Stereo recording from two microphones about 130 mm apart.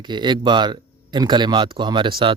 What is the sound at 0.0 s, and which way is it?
Speech, 35° right (ahead or behind).